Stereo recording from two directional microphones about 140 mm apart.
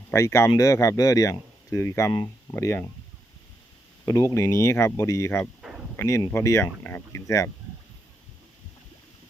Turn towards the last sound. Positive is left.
turn(degrees=20)  # may be behind; listen again after turning